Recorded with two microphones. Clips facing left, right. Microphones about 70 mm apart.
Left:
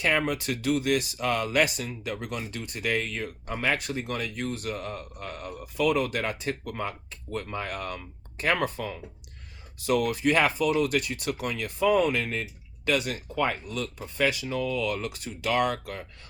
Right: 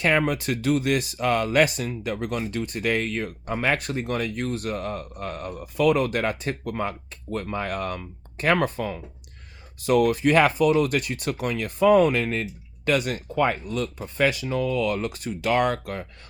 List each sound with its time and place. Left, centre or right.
0.0 s speech: right
9.8 s speech: right